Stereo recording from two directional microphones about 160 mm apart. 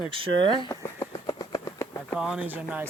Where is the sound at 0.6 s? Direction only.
25° left (ahead or behind).